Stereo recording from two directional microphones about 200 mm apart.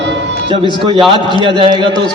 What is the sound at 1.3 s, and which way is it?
Speech, 25° right (ahead or behind).